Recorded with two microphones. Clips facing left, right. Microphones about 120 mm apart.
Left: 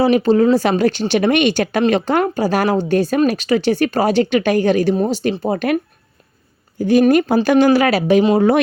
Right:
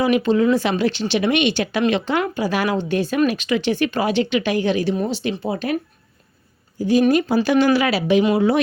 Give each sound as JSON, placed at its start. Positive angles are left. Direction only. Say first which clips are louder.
{"t": 0.0, "sound": "speech", "louder": "left 4 dB", "side_deg": 35}
{"t": 6.7, "sound": "speech", "louder": "left 4 dB", "side_deg": 55}